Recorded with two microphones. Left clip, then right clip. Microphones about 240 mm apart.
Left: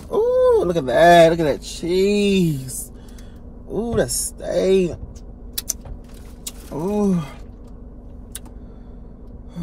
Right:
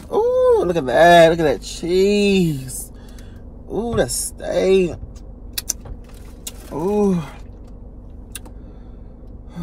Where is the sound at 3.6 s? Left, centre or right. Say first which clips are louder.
Right 1 dB; centre.